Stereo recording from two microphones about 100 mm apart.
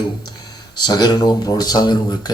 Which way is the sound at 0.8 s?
45° left (ahead or behind).